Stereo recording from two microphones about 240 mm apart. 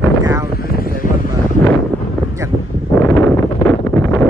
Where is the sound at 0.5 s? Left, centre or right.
Left.